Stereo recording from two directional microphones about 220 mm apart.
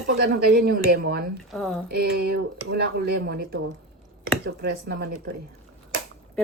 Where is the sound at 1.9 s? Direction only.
50° right (ahead or behind).